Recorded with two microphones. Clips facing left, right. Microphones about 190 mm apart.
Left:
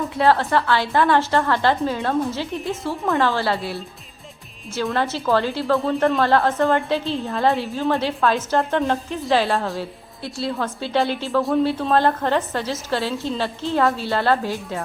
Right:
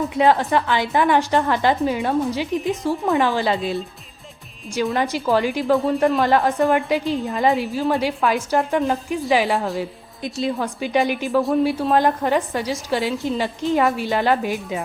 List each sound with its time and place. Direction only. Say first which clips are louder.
0.1 s a woman's voice: even; 15° right (ahead or behind)
4.9 s a woman's voice: even; 15° right (ahead or behind)